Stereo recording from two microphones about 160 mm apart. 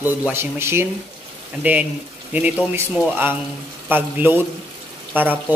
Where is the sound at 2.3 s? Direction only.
10° right (ahead or behind).